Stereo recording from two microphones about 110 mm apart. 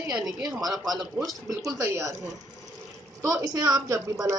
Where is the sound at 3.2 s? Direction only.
30° right (ahead or behind).